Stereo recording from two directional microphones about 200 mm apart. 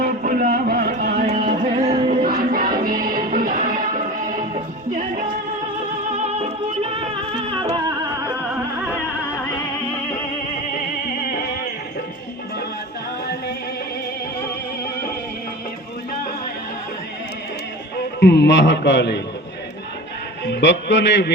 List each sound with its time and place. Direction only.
0.0 s a sound: 45° right (ahead or behind)
1.3 s music: 25° right (ahead or behind)
2.0 s music: 50° right (ahead or behind); by 8.8 s 15° right (ahead or behind)
10.7 s music: 45° left (ahead or behind)
18.2 s a man's voice: 55° left (ahead or behind)
20.4 s a man's voice: 60° left (ahead or behind)